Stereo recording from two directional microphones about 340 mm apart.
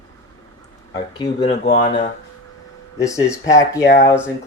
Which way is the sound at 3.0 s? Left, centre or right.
Centre.